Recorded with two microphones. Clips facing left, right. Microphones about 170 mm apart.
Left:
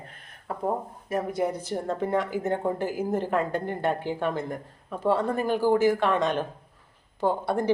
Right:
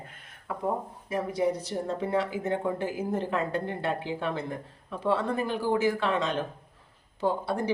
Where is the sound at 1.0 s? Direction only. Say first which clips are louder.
Even; 50° left (ahead or behind).